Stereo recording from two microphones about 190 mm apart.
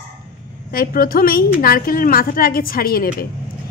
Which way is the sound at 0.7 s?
50° left (ahead or behind).